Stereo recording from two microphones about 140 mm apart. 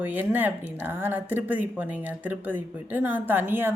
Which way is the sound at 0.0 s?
15° right (ahead or behind).